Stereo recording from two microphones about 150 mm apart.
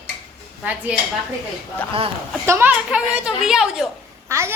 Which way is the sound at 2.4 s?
15° right (ahead or behind).